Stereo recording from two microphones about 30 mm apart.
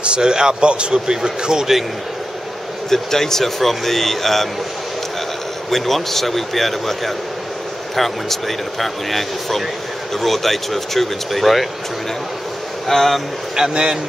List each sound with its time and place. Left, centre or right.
0.0 s speech: right
2.9 s a man's voice: centre
5.7 s a man's voice: centre
12.8 s a man's voice: centre
13.6 s speech: right